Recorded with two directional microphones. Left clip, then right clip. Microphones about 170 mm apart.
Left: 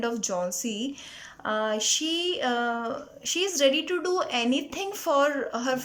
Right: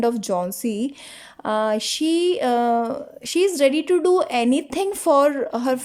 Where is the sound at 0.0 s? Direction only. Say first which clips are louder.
Right 7 dB; 30° right (ahead or behind).